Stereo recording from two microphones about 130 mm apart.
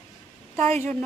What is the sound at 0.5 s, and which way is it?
Speech, 50° right (ahead or behind).